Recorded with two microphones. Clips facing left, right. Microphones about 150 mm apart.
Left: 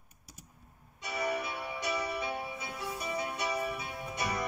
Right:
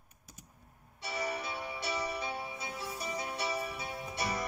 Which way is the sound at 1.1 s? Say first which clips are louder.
Left 3 dB; 60° left (ahead or behind).